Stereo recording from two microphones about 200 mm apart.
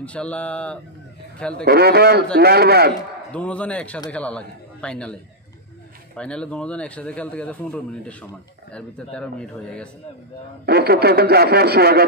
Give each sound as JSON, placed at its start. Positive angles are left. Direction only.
{"t": 0.0, "sound": "a man's voice", "side_deg": 5}
{"t": 1.5, "sound": "a man's voice", "side_deg": -50}
{"t": 3.3, "sound": "a man's voice", "side_deg": 5}
{"t": 6.1, "sound": "a man's voice", "side_deg": 5}
{"t": 10.6, "sound": "a man's voice", "side_deg": -50}